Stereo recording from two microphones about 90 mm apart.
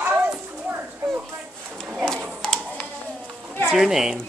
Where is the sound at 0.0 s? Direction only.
15° right (ahead or behind).